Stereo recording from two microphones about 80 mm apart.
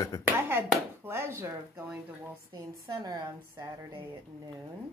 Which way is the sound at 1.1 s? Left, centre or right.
Right.